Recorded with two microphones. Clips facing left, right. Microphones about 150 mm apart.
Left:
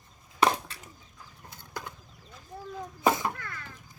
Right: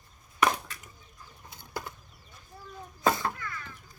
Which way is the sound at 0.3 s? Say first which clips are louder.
Left 2 dB; 30° left (ahead or behind).